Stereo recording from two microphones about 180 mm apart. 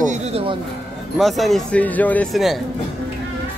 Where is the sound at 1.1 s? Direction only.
Centre (ahead or behind).